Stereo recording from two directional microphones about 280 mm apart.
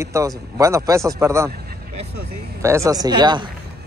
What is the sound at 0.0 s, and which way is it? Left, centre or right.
Speech, centre.